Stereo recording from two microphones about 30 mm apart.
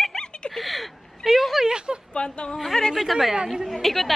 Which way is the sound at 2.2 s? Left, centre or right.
Left.